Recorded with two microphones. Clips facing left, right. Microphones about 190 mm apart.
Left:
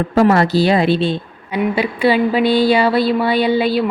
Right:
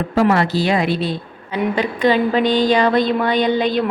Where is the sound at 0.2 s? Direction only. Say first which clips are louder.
Left 3 dB; 40° left (ahead or behind).